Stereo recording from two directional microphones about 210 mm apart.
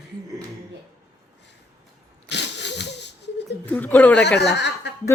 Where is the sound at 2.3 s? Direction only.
55° left (ahead or behind).